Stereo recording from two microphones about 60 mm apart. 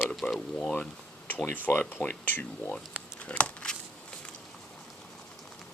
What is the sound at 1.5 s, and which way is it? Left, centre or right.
Speech, left.